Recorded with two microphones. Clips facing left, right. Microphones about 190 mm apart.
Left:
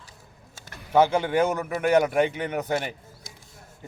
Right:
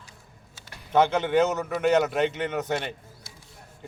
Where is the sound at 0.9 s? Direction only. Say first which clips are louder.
Left 1 dB; 10° left (ahead or behind).